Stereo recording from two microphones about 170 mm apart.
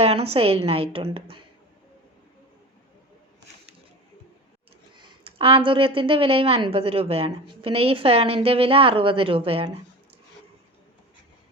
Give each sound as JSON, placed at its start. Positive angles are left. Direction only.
{"t": 0.0, "sound": "a woman's voice", "side_deg": -35}
{"t": 4.9, "sound": "a woman's voice", "side_deg": -30}